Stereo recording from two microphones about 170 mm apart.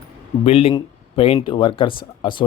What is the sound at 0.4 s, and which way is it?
Speech, 35° left (ahead or behind).